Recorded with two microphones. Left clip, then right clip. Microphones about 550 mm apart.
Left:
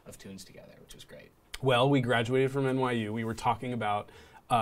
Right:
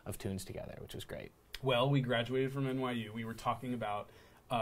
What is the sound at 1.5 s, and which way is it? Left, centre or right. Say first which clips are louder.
Speech: left 7 dB; left.